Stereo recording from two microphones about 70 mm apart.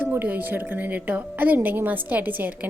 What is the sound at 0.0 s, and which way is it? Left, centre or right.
Speech, right.